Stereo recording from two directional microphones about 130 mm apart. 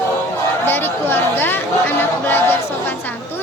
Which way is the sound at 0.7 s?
15° left (ahead or behind).